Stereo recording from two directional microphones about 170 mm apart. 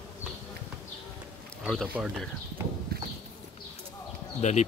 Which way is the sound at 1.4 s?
5° left (ahead or behind).